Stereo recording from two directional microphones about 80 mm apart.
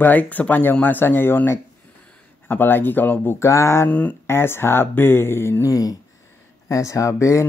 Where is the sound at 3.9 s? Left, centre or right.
Centre.